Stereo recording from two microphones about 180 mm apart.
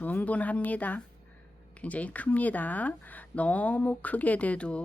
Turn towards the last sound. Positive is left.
turn(degrees=5)  # may be behind; listen again after turning